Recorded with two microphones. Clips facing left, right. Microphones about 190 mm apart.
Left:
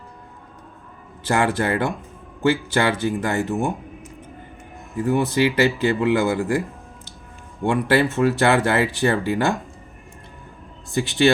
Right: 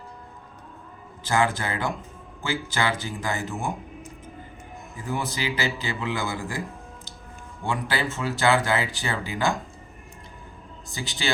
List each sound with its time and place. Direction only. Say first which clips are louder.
1.2 s speech: left 4 dB; 65° left (ahead or behind)
4.9 s speech: left 11 dB; 65° left (ahead or behind)
7.7 s speech: left 9 dB; 65° left (ahead or behind)
10.9 s speech: left 14 dB; 60° left (ahead or behind)